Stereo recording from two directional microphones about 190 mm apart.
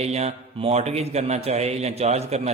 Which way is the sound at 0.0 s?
35° right (ahead or behind).